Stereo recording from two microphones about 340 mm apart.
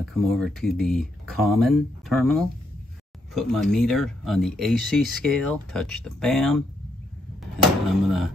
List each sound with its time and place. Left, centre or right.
0.0 s speech: centre
7.9 s speech: centre